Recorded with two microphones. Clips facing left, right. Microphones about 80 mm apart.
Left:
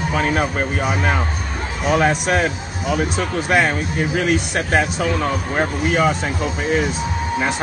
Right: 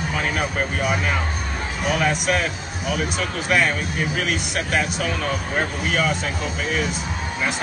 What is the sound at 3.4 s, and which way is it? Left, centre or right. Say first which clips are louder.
Speech: left 2 dB; left.